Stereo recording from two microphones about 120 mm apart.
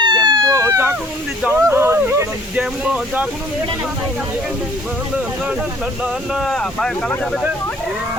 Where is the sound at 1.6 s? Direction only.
20° right (ahead or behind).